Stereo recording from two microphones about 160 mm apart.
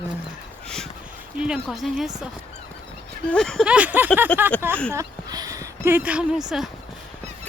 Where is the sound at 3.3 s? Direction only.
Centre (ahead or behind).